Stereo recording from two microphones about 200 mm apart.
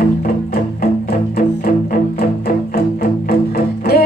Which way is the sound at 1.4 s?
45° left (ahead or behind).